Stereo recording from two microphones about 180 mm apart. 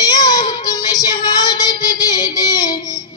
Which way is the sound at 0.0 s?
20° left (ahead or behind).